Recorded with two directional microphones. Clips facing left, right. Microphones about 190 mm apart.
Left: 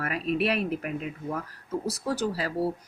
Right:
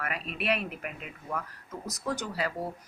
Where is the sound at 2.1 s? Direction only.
35° left (ahead or behind).